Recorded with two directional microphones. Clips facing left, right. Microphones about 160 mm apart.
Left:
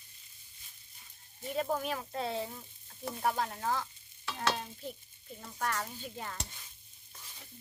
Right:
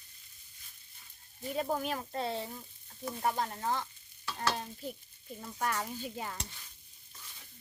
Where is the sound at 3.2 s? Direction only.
5° right (ahead or behind).